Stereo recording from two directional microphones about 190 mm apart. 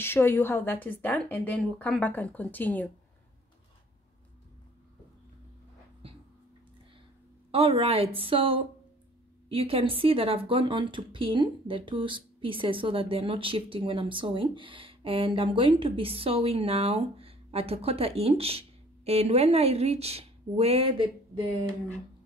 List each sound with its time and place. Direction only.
0.0 s a woman's voice: 10° left (ahead or behind)
7.5 s speech: 30° right (ahead or behind)